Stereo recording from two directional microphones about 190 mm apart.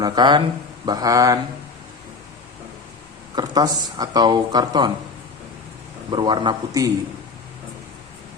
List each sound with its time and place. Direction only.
0.0 s speech: 25° right (ahead or behind)
3.3 s speech: 20° right (ahead or behind)
6.1 s speech: 25° right (ahead or behind)